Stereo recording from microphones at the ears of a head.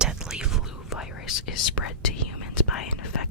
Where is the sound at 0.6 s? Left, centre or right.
Left.